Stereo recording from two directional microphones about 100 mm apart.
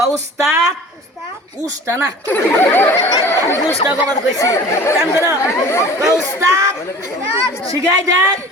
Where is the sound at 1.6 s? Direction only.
30° right (ahead or behind).